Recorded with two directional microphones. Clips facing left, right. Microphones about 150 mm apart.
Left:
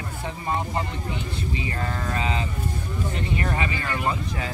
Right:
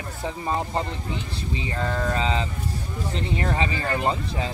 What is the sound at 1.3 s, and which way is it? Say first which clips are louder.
Speech: left 1 dB; 30° right (ahead or behind).